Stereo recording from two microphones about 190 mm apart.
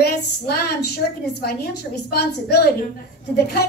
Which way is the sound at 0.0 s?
55° left (ahead or behind).